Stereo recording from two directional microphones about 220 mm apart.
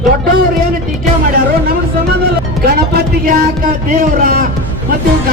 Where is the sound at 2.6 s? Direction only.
45° right (ahead or behind).